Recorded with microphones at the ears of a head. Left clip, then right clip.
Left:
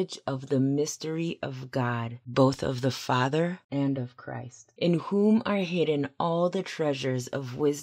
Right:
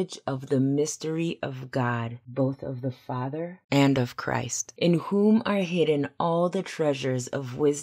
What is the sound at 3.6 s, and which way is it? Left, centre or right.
Speech, right.